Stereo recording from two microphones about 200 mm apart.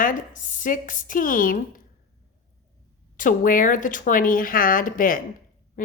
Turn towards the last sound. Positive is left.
turn(degrees=45)  # may be behind; listen again after turning